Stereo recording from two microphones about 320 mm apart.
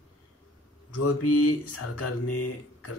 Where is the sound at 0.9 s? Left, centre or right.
Left.